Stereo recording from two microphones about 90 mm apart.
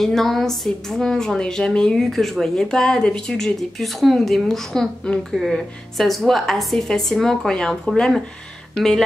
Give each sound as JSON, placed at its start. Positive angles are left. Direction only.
{"t": 0.0, "sound": "a woman's voice", "side_deg": 0}